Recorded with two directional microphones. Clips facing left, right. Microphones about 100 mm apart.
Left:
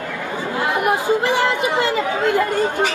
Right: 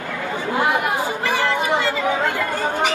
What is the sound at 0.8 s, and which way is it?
Speech, 20° left (ahead or behind).